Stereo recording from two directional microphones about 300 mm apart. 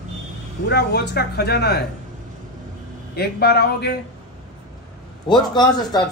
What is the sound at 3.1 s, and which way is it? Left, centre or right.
Speech, left.